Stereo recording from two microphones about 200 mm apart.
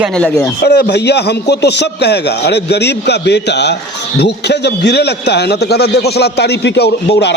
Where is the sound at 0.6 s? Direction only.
55° left (ahead or behind).